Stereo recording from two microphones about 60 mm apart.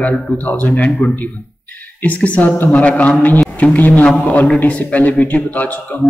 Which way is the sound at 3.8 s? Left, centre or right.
Left.